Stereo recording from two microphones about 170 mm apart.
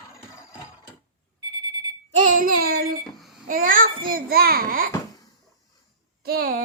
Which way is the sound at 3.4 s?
55° right (ahead or behind).